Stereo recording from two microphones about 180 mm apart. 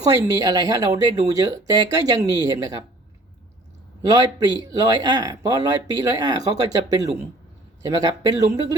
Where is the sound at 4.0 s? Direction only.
20° right (ahead or behind).